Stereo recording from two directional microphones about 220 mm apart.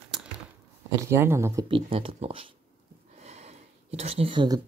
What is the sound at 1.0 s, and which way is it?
Speech, 10° right (ahead or behind).